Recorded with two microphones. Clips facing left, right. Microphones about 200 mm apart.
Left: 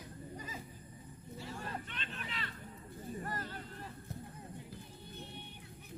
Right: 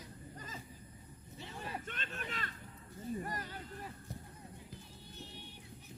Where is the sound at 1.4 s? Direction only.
15° right (ahead or behind).